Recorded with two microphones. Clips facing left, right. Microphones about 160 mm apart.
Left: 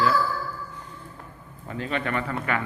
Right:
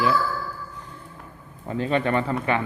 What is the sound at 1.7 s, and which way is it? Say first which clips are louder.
Speech: right 5 dB; 30° right (ahead or behind).